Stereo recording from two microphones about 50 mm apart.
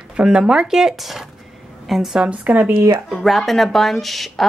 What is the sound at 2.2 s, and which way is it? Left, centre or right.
Speech, right.